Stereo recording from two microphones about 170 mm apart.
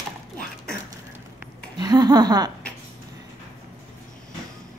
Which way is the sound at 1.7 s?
25° right (ahead or behind).